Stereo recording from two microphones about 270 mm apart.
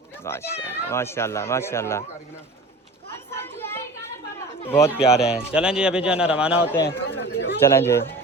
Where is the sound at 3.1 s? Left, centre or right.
Centre.